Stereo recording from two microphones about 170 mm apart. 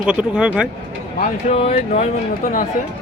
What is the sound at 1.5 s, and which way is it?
Speech, 35° left (ahead or behind).